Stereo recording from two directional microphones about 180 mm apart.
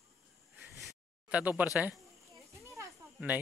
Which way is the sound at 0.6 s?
Centre (ahead or behind).